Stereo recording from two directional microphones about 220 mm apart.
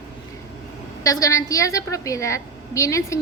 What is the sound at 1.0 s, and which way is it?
A woman's voice, 15° left (ahead or behind).